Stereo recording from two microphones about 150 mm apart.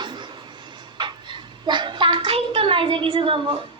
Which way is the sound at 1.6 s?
30° right (ahead or behind).